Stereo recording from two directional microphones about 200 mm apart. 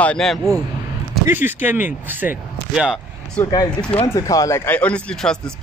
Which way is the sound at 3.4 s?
10° left (ahead or behind).